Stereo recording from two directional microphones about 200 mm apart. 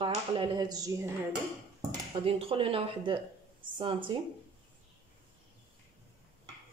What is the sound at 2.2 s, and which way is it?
Speech, 30° right (ahead or behind).